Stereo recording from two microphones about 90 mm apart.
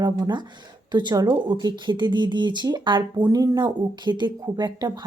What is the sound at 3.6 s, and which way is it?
Speech, 60° right (ahead or behind).